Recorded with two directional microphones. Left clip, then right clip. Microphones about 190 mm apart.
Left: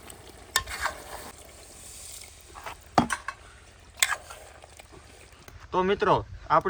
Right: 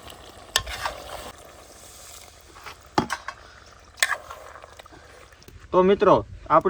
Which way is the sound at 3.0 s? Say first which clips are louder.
Right 1 dB; 45° right (ahead or behind).